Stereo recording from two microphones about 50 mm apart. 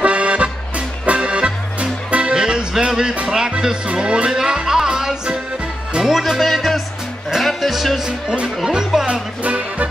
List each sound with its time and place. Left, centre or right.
0.0 s music: right; by 8.1 s centre
8.6 s music: centre
9.4 s music: right